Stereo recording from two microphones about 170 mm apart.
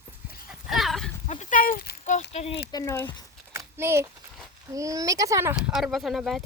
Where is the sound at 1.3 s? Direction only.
45° left (ahead or behind).